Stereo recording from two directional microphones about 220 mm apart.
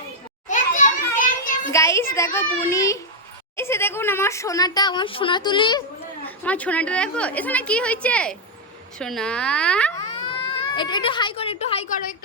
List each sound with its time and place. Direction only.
0.4 s children playing: 35° left (ahead or behind)
1.7 s a woman's voice: 15° left (ahead or behind)
6.2 s a woman's voice: 5° left (ahead or behind)
10.3 s speech: 20° left (ahead or behind)